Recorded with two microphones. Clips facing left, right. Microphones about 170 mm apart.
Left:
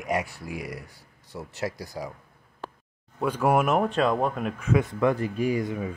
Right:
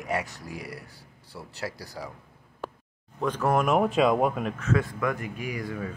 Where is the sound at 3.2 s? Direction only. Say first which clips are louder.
Left 2 dB; 10° left (ahead or behind); by 4.5 s 5° right (ahead or behind).